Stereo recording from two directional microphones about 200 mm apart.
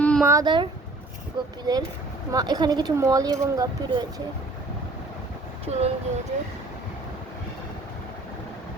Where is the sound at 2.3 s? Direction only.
20° right (ahead or behind).